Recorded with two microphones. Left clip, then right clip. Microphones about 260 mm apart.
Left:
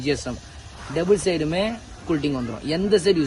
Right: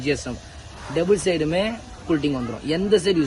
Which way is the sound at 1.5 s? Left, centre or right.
Left.